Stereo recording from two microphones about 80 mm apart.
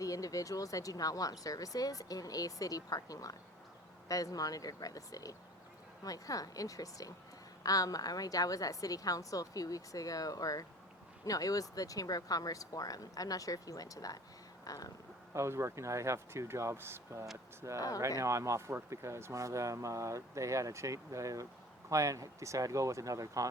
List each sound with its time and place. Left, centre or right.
0.0 s speech: left
14.6 s a sound: left
15.3 s speech: right